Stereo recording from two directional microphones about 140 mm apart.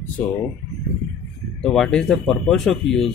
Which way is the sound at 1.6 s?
5° left (ahead or behind).